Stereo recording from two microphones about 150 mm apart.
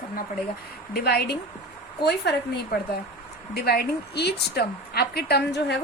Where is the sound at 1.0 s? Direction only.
90° left.